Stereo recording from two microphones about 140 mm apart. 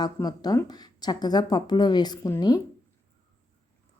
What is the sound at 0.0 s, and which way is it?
A woman's voice, 30° left (ahead or behind).